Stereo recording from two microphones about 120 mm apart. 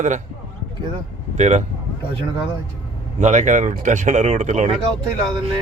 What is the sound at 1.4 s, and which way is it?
Speech, 75° right (ahead or behind).